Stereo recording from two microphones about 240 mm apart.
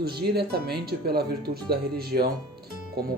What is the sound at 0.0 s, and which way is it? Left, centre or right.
Speech, right.